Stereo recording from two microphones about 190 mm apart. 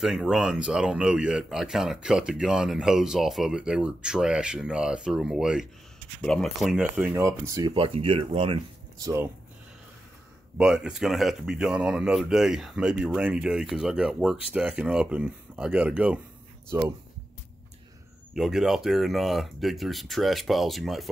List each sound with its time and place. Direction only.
0.0 s speech: centre (ahead or behind); by 7.7 s 15° right (ahead or behind)
7.7 s speech: 30° right (ahead or behind)
10.6 s speech: 5° right (ahead or behind)
18.3 s speech: centre (ahead or behind)